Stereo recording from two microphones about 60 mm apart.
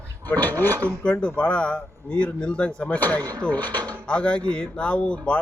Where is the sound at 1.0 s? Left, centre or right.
Centre.